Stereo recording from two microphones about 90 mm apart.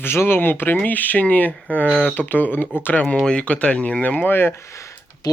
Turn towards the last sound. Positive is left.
turn(degrees=35)  # may be behind; listen again after turning